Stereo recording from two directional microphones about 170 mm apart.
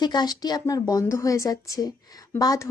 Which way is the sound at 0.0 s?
25° left (ahead or behind).